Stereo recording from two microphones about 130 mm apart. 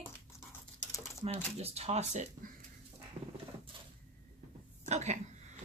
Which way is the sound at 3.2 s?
45° right (ahead or behind).